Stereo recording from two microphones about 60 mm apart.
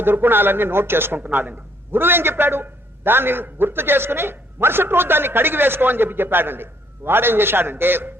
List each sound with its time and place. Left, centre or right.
0.0 s speech: right